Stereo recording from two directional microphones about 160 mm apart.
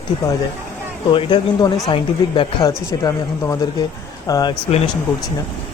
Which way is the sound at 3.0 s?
20° left (ahead or behind).